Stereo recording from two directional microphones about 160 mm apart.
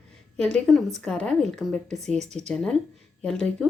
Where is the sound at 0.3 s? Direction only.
5° left (ahead or behind).